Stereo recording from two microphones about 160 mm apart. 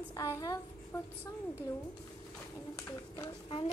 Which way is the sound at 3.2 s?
30° left (ahead or behind).